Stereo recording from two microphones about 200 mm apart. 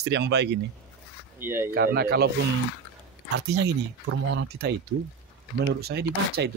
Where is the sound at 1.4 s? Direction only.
10° right (ahead or behind).